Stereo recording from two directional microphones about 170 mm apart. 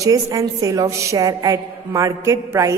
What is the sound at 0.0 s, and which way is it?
A woman's voice, 20° right (ahead or behind).